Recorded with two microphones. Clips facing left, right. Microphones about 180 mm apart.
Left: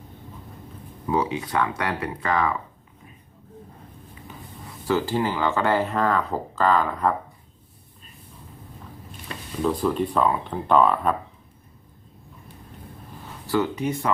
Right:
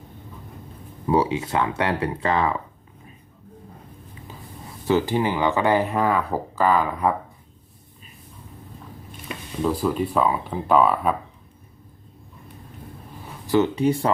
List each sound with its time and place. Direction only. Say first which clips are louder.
1.0 s speech: right 4 dB; 30° right (ahead or behind)
4.9 s speech: right 2 dB; 20° right (ahead or behind)
9.3 s speech: right 1 dB; 5° right (ahead or behind)
13.5 s speech: right 5 dB; 25° right (ahead or behind)